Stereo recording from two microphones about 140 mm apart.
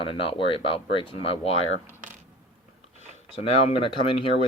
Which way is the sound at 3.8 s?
40° left (ahead or behind).